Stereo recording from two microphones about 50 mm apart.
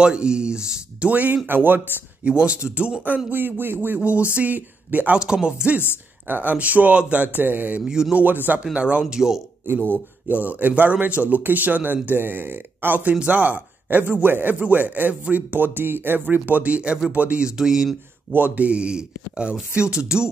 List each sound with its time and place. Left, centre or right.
0.0 s speech: centre
1.1 s speech: right
2.2 s speech: right
3.3 s speech: right
4.0 s speech: right
5.1 s speech: centre
6.2 s speech: right
7.8 s speech: centre
8.1 s speech: right
9.1 s speech: centre
9.6 s speech: right
10.3 s speech: right
17.5 s speech: centre
18.3 s speech: right; by 20.2 s centre